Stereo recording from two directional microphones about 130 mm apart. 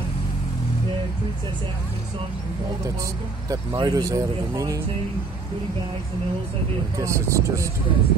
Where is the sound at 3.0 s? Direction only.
25° right (ahead or behind).